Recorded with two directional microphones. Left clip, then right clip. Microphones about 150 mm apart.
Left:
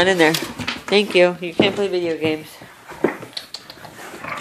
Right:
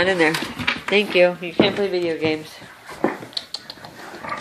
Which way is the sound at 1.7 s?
10° left (ahead or behind).